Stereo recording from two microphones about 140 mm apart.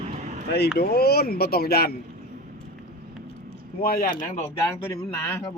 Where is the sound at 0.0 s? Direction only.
55° right (ahead or behind).